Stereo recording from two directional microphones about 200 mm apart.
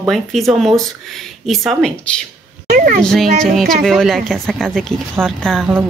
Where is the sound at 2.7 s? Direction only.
45° right (ahead or behind).